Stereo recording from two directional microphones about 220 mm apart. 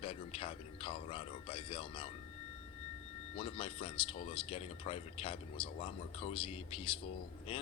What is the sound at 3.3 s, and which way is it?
Speech, 25° left (ahead or behind).